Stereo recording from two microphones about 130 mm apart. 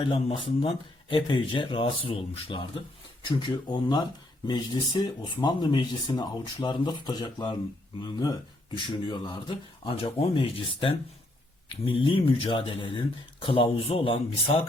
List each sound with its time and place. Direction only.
0.0 s speech: 45° left (ahead or behind)